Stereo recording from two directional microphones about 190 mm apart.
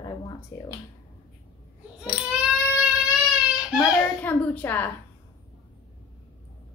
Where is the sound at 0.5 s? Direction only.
15° left (ahead or behind).